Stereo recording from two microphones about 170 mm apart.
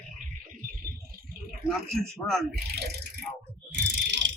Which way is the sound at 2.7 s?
75° right (ahead or behind).